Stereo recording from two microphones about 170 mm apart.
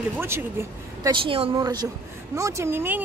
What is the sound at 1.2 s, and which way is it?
A woman's voice, 35° right (ahead or behind).